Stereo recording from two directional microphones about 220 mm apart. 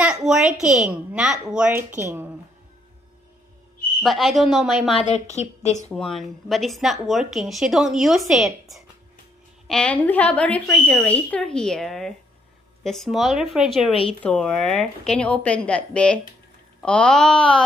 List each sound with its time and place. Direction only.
0.0 s speech: 5° right (ahead or behind)
4.0 s speech: centre (ahead or behind)
4.9 s a woman's voice: 30° left (ahead or behind)
5.9 s speech: centre (ahead or behind)